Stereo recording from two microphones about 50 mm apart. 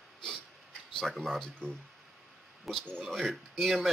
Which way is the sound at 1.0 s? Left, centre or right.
Centre.